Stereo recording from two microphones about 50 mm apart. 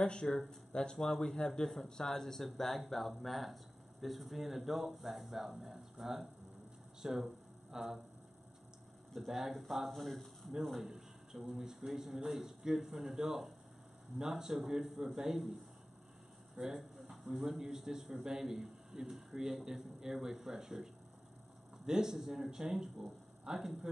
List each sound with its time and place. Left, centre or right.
0.0 s a man's voice: centre
9.1 s a man's voice: centre
16.5 s a sound: centre
17.6 s a man's voice: centre